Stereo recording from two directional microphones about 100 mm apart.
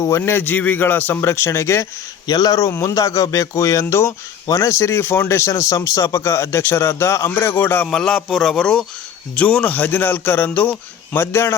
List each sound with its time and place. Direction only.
0.2 s speech: 20° left (ahead or behind)
2.2 s speech: 40° left (ahead or behind); by 7.9 s 20° left (ahead or behind)
7.9 s a man's voice: 5° left (ahead or behind); by 11.5 s 25° left (ahead or behind)